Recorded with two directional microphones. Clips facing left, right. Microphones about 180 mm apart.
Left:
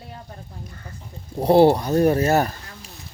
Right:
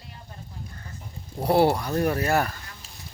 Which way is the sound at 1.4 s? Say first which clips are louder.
Left 6 dB; 25° left (ahead or behind).